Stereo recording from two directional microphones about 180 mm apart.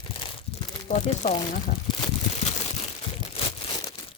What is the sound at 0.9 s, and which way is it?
Speech, 40° left (ahead or behind).